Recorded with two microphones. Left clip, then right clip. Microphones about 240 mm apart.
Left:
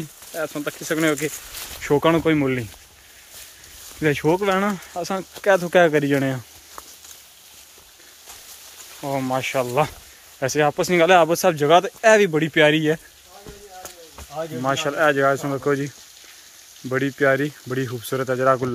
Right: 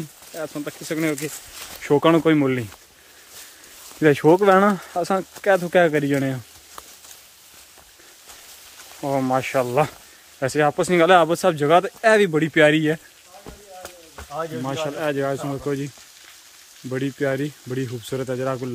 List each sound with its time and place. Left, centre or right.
0.3 s speech: centre
4.0 s speech: centre
9.0 s speech: centre
16.9 s speech: centre